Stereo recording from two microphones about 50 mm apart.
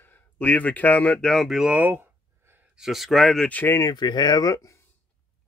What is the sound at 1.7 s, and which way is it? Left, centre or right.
Speech, right.